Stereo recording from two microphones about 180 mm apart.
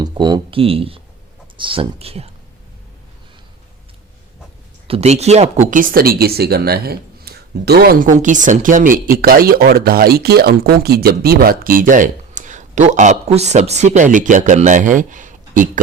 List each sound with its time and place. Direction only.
0.0 s speech: 25° right (ahead or behind)
4.9 s speech: 35° right (ahead or behind)